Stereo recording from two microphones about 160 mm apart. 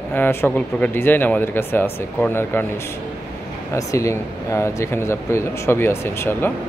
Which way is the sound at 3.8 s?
20° left (ahead or behind).